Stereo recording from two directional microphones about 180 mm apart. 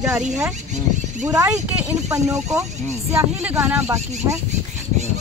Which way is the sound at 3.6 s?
10° right (ahead or behind).